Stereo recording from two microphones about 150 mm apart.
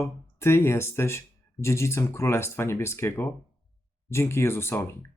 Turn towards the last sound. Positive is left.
turn(degrees=15)  # may be behind; listen again after turning